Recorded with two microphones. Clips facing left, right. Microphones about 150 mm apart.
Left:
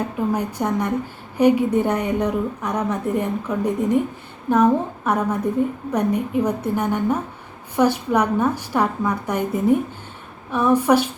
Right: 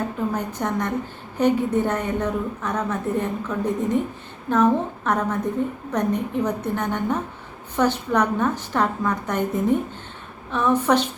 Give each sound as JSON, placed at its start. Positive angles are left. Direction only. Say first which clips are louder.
{"t": 0.3, "sound": "a woman's voice", "louder": "left 3 dB", "side_deg": 10}